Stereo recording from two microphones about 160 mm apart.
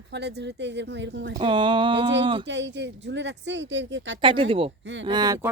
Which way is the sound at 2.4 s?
90° right.